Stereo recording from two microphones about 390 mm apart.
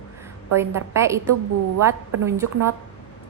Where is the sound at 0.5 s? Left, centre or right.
Centre.